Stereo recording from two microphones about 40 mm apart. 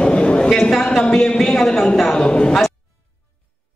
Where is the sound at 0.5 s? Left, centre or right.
Centre.